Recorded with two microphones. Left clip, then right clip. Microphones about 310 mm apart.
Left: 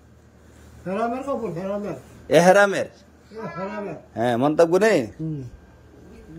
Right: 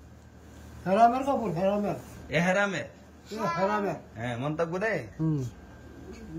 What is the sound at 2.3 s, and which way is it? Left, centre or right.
Speech, centre.